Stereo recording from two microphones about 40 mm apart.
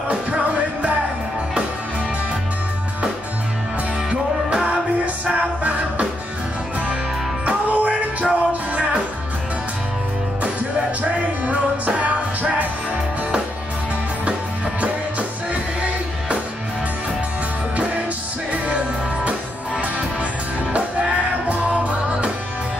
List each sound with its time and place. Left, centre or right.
4.6 s music: right
7.4 s music: right
11.0 s music: right
20.7 s music: right